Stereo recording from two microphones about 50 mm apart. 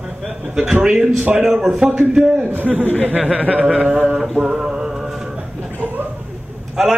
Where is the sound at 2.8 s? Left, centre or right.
Left.